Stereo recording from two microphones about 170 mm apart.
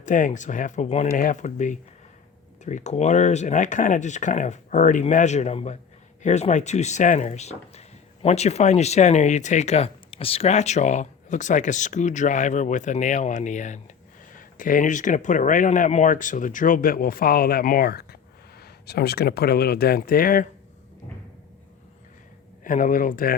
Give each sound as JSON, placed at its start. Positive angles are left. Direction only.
{"t": 0.0, "sound": "speech", "side_deg": 50}
{"t": 22.6, "sound": "speech", "side_deg": 50}